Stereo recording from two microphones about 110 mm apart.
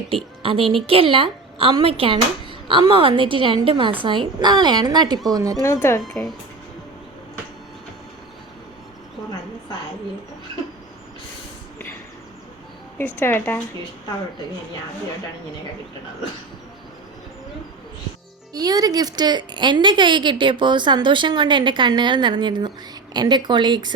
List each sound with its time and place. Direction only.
0.4 s a woman's voice: 55° right (ahead or behind); by 5.6 s 35° right (ahead or behind)
5.6 s speech: 25° left (ahead or behind)
13.0 s speech: 20° left (ahead or behind)
18.5 s a woman's voice: 35° right (ahead or behind)